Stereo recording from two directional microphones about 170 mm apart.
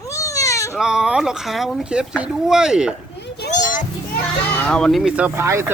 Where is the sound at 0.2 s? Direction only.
20° left (ahead or behind).